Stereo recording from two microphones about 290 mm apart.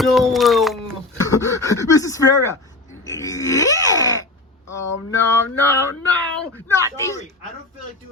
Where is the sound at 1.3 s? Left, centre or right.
Centre.